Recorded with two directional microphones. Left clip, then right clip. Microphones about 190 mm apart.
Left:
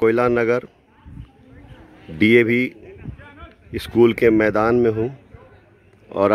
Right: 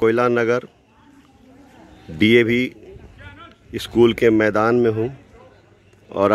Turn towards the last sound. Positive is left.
turn(degrees=0)  # may be behind; listen again after turning